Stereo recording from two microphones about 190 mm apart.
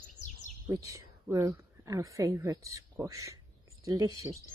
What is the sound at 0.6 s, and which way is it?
A woman's voice, 15° right (ahead or behind).